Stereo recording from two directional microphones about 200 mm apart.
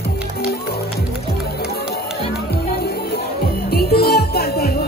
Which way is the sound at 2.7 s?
50° left (ahead or behind).